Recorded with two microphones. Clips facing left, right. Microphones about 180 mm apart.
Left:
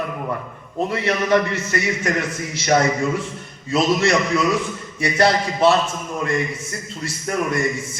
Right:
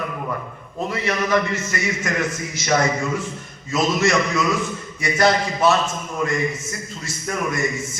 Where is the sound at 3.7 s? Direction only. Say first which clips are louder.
Left 1 dB; 30° left (ahead or behind).